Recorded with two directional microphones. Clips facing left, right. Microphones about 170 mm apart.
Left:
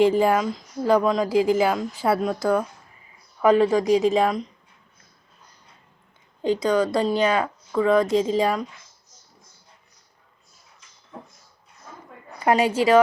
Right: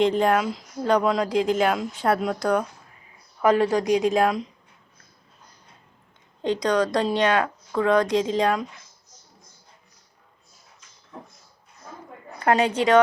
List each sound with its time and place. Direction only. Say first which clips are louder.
0.0 s speech: left 2 dB; 5° left (ahead or behind)
6.4 s speech: left 1 dB; 5° left (ahead or behind)
12.5 s speech: left 1 dB; 5° left (ahead or behind)